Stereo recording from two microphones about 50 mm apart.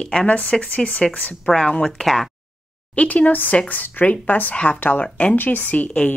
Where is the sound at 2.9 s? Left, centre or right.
Left.